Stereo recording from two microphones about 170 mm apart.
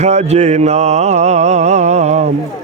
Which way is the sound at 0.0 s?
40° right (ahead or behind).